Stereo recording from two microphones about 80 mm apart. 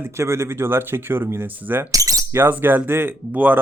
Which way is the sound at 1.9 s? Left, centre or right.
Right.